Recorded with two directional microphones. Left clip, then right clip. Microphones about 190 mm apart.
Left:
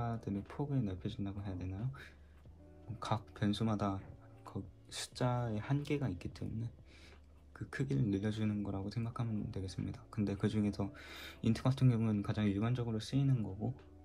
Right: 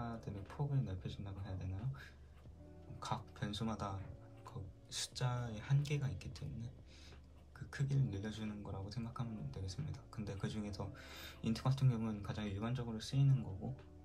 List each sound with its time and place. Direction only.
0.0 s speech: 40° left (ahead or behind)
3.0 s speech: 35° left (ahead or behind)